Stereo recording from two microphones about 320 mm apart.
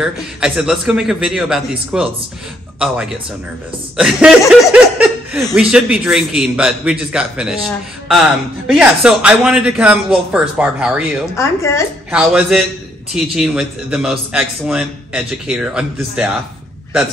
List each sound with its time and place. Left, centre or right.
0.0 s speech: centre
3.9 s speech: centre
11.3 s a woman's voice: centre
12.1 s speech: centre